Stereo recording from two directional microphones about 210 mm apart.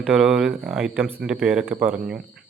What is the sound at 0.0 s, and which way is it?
A man's voice, 5° right (ahead or behind).